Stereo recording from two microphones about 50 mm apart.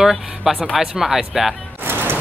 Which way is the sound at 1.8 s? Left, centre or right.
Right.